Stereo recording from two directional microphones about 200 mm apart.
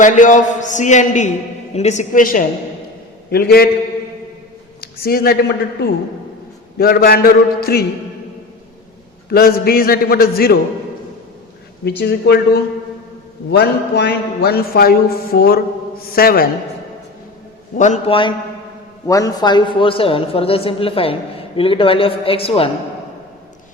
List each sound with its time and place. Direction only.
0.0 s a man's voice: 40° left (ahead or behind)
4.8 s a man's voice: 50° left (ahead or behind)
9.3 s a man's voice: 50° left (ahead or behind)
11.9 s speech: 55° left (ahead or behind)
13.5 s a man's voice: 60° left (ahead or behind)
17.7 s a man's voice: 35° left (ahead or behind)